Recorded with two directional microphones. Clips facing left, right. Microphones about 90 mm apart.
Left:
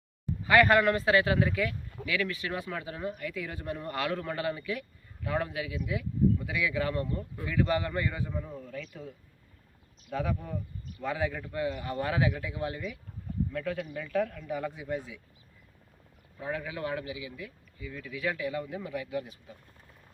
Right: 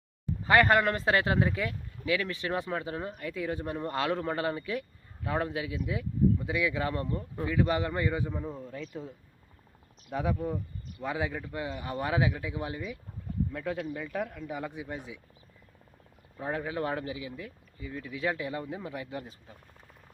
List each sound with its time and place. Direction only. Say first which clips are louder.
0.4 s a man's voice: left 1 dB; 30° right (ahead or behind)
16.4 s speech: right 2 dB; 35° right (ahead or behind)